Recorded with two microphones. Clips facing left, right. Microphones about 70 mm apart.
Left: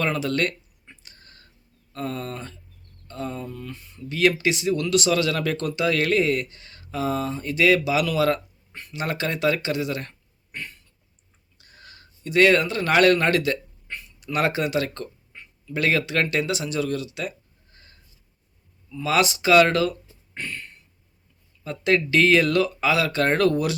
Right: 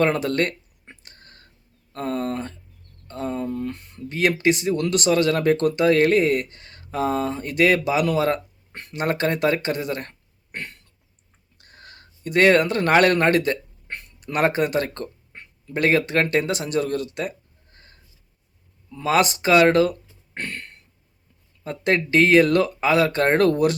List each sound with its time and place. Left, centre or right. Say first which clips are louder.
0.0 s speech: right 3 dB; right
0.9 s whispering: right 3 dB; right
1.9 s speech: right 5 dB; right
4.4 s speech: right 3 dB; right
8.7 s speech: right 4 dB; right
10.5 s throat clearing: right 2 dB; right
11.6 s speech: right 2 dB; right
13.9 s a sound: right 1 dB; right
15.7 s speech: right 3 dB; right
19.9 s a sound: right 2 dB; right
21.6 s speech: even; right